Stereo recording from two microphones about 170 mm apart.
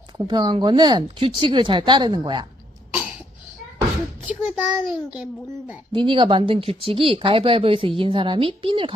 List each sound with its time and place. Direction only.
0.2 s speech: 25° right (ahead or behind)
4.2 s a child's voice: 10° right (ahead or behind)
5.9 s speech: 30° right (ahead or behind)